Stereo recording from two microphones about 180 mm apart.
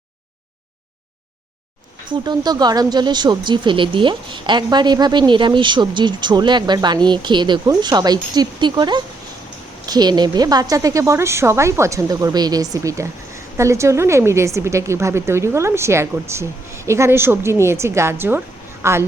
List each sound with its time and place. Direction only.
2.0 s a woman's voice: 25° right (ahead or behind)